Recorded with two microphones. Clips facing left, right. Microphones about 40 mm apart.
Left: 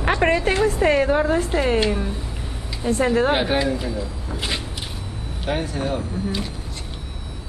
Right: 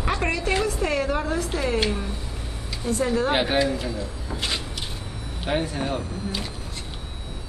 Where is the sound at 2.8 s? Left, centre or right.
Left.